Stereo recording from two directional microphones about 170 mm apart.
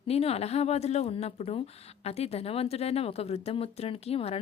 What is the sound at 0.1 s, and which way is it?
A woman's voice, 35° left (ahead or behind).